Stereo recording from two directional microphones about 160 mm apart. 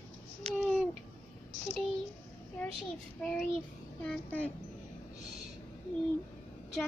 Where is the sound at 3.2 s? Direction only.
5° left (ahead or behind).